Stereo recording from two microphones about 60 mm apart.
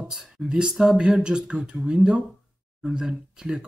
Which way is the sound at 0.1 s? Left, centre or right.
Centre.